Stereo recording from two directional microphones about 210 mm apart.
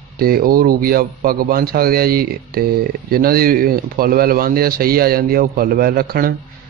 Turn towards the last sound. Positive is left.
turn(degrees=-45)  # may be behind; listen again after turning